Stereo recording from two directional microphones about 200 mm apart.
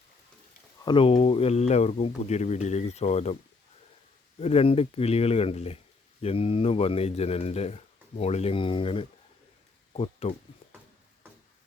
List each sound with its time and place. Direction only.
0.9 s speech: 25° left (ahead or behind)
4.4 s speech: 30° left (ahead or behind)